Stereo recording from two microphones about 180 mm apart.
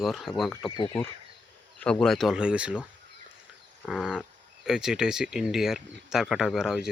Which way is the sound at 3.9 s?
5° right (ahead or behind).